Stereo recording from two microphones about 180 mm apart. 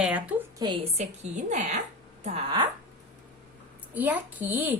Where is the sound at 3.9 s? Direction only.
10° right (ahead or behind).